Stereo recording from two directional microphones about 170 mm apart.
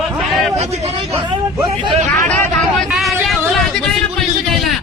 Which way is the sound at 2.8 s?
Centre (ahead or behind).